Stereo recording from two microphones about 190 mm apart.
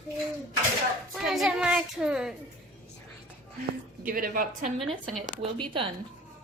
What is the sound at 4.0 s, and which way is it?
Speech, 50° right (ahead or behind).